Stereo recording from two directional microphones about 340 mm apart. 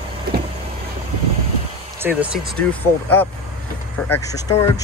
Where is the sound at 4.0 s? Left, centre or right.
Centre.